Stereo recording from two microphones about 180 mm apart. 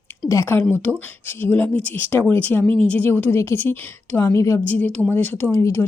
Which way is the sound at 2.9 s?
10° left (ahead or behind).